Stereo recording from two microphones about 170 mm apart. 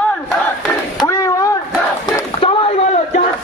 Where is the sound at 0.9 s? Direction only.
20° left (ahead or behind).